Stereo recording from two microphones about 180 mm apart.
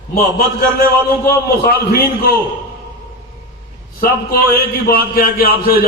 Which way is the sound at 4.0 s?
55° left (ahead or behind).